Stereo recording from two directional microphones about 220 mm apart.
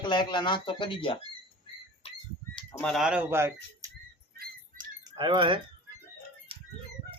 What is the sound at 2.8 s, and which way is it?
Speech, centre (ahead or behind).